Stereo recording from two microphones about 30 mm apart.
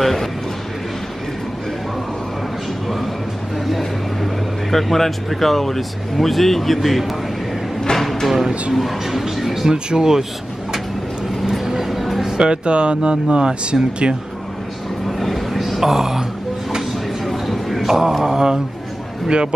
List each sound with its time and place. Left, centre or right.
0.0 s speech: centre
3.6 s speech: centre
8.0 s a sound: centre
8.7 s speech: centre
9.7 s speech: right
11.4 s music: centre
12.4 s speech: right
15.0 s a sound: centre
15.8 s speech: centre
17.3 s a sound: centre
18.2 s speech: right